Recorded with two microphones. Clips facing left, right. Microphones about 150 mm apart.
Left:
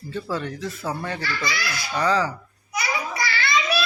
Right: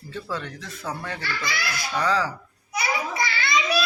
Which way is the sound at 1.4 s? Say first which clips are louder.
Left 2 dB; 55° right (ahead or behind).